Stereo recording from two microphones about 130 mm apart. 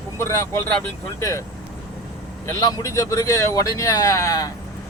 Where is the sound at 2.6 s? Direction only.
25° left (ahead or behind).